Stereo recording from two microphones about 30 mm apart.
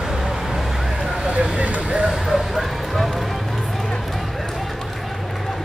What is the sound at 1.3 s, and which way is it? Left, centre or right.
Speech, right.